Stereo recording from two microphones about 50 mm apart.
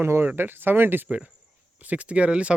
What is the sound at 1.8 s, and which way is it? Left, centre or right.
Speech, right.